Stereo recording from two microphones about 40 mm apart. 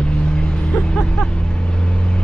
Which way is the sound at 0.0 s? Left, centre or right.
Left.